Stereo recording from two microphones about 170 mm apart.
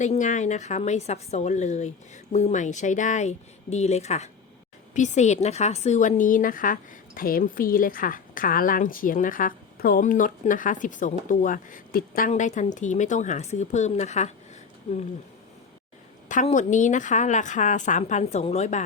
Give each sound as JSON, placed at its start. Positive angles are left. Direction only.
{"t": 0.0, "sound": "a woman's voice", "side_deg": 45}
{"t": 12.3, "sound": "a woman's voice", "side_deg": 45}
{"t": 16.3, "sound": "a woman's voice", "side_deg": 45}